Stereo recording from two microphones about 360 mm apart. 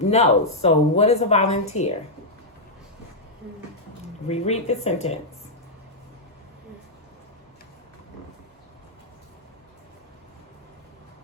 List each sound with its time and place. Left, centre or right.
0.1 s speech: centre
4.3 s speech: centre